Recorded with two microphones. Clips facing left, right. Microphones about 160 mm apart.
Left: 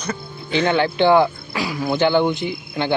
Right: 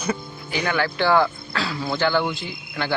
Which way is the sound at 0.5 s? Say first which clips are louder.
Left 6 dB; 25° left (ahead or behind).